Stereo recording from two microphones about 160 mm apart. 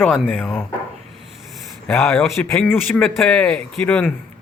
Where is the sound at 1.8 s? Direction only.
Centre (ahead or behind).